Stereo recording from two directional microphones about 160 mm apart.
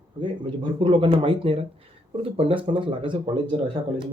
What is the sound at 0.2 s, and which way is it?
Speech, 30° right (ahead or behind).